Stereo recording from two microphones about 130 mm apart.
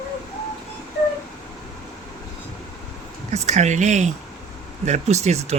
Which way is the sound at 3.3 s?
60° right (ahead or behind).